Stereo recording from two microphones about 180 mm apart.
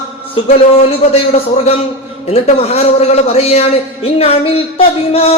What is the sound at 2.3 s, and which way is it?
Speech, 35° left (ahead or behind).